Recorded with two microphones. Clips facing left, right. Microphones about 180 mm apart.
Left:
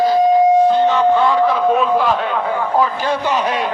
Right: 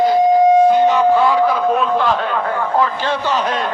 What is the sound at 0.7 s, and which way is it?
Music, 10° right (ahead or behind).